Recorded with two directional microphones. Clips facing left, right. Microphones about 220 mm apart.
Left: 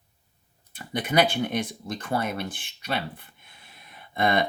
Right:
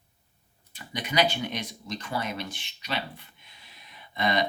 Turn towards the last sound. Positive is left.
turn(degrees=55)  # may be behind; listen again after turning